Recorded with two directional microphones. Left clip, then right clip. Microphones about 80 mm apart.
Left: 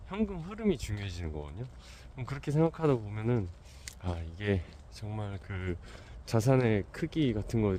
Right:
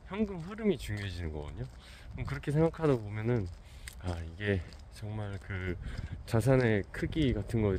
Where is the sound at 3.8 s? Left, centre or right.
Left.